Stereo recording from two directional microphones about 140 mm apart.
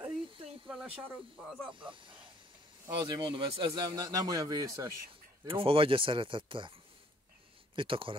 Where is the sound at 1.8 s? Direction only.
35° right (ahead or behind).